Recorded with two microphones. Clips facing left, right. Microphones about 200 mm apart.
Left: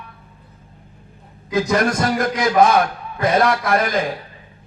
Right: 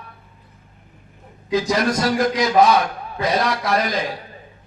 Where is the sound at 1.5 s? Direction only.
50° left (ahead or behind).